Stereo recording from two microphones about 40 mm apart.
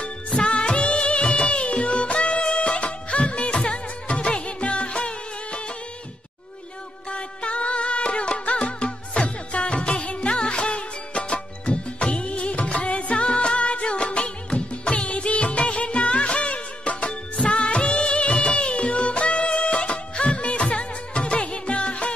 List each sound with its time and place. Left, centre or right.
0.3 s music of bollywood: left
7.1 s music: left
17.5 s music of bollywood: left